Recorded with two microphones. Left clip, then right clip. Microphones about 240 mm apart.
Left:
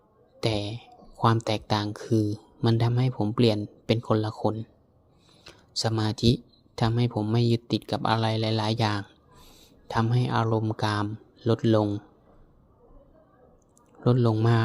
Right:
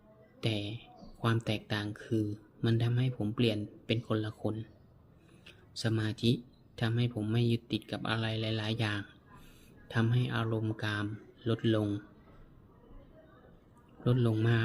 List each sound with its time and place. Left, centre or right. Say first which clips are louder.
0.3 s speech: left 8 dB; left
14.0 s speech: left 8 dB; left